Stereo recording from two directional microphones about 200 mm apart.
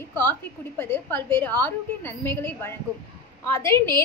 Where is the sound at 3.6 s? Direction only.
25° right (ahead or behind).